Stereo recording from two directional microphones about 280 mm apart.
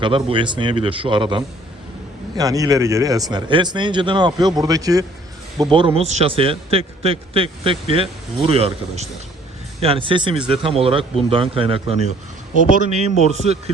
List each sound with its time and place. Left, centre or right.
0.0 s a man's voice: centre